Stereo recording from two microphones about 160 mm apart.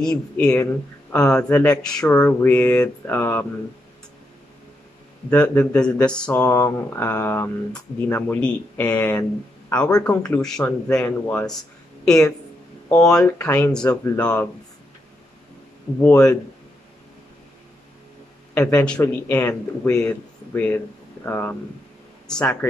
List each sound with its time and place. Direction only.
0.0 s speech: 5° left (ahead or behind)
5.3 s speech: 10° left (ahead or behind)
6.4 s speech: 15° left (ahead or behind)
12.8 s a sound: 20° left (ahead or behind)
13.1 s speech: 10° left (ahead or behind)
15.9 s speech: 20° left (ahead or behind)
18.5 s a man's voice: 15° left (ahead or behind)